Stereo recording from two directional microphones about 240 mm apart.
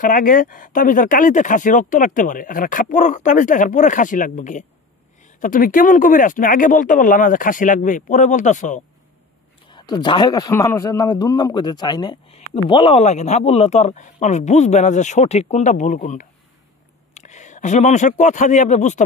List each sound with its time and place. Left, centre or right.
0.0 s speech: left
9.7 s a man's voice: centre